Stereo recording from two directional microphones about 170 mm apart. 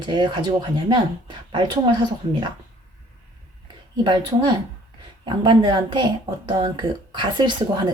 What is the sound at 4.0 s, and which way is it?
A woman's voice, 25° right (ahead or behind).